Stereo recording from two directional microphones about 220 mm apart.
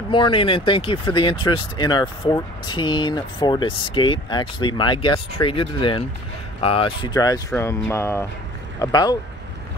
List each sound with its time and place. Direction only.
0.1 s speech: 25° left (ahead or behind)